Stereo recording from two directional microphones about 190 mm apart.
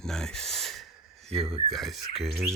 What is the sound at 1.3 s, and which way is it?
Speech, 30° right (ahead or behind).